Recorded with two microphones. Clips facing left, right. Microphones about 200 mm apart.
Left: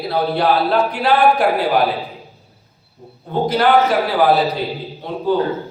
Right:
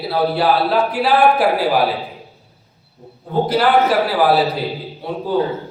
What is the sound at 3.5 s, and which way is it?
Speech, 5° right (ahead or behind).